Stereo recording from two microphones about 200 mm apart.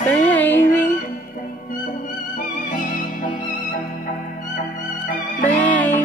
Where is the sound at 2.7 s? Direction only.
40° left (ahead or behind).